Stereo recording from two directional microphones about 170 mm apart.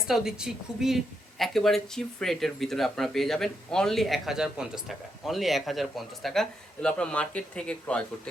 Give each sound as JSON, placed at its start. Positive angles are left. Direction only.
{"t": 0.0, "sound": "speech", "side_deg": -5}